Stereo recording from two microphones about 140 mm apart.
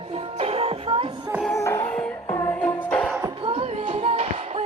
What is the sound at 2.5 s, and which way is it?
Music, 10° left (ahead or behind).